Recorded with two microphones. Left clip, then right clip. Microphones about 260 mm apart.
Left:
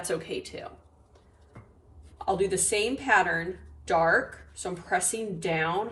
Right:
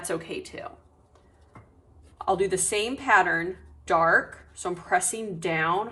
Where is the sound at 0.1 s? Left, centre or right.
Centre.